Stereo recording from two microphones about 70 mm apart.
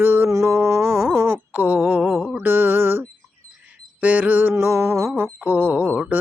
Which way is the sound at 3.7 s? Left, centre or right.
Right.